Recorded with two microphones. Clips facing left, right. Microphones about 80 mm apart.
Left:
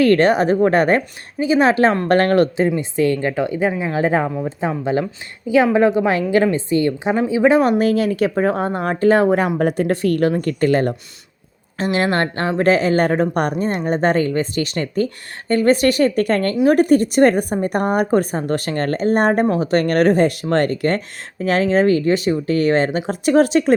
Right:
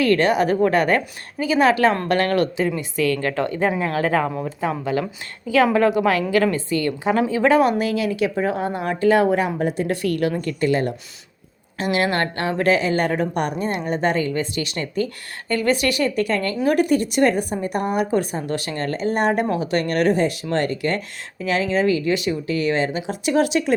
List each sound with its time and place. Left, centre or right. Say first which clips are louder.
0.0 s a woman's voice: left 4 dB; left; by 7.6 s centre
7.6 s a woman's voice: left 3 dB; left
9.6 s a woman's voice: left 4 dB; left
9.9 s a woman's voice: left 4 dB; left
11.8 s a woman's voice: left 2 dB; left